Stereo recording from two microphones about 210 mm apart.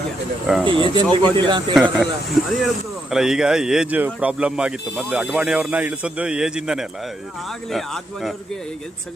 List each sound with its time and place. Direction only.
0.6 s a man's voice: 25° right (ahead or behind)
1.7 s speech: centre (ahead or behind)